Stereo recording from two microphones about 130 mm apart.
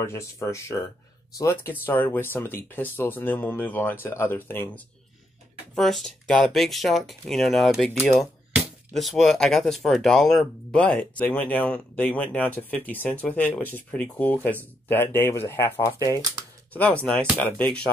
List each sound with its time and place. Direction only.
0.0 s speech: 20° left (ahead or behind)
5.8 s speech: centre (ahead or behind); by 16.2 s 25° left (ahead or behind)
17.0 s speech: 10° left (ahead or behind)